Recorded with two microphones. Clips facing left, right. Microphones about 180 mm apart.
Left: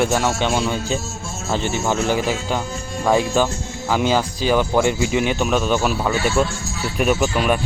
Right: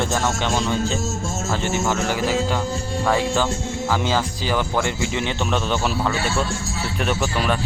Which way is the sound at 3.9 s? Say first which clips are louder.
Left 4 dB; 15° left (ahead or behind).